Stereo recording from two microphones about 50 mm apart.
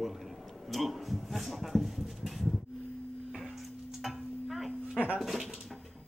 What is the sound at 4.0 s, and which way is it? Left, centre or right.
Stir, centre.